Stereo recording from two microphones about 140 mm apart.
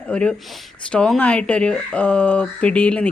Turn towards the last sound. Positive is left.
turn(degrees=10)  # may be behind; listen again after turning